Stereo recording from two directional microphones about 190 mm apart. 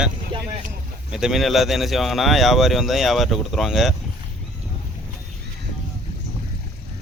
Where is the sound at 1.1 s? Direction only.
Centre (ahead or behind).